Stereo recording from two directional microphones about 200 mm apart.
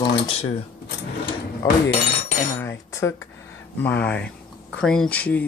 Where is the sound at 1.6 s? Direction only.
20° left (ahead or behind).